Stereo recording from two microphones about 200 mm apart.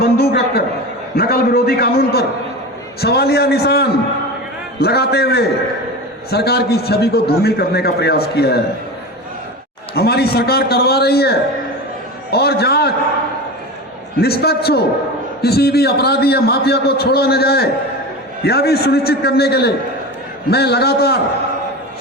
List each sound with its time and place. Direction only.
0.0 s a man's voice: 55° left (ahead or behind)
9.9 s a man's voice: 50° left (ahead or behind)
14.2 s a man's voice: 50° left (ahead or behind)